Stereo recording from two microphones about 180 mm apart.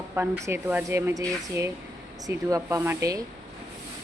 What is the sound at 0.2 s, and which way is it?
Speech, 15° right (ahead or behind).